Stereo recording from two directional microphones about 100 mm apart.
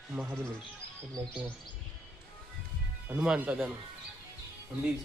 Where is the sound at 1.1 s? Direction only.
40° right (ahead or behind).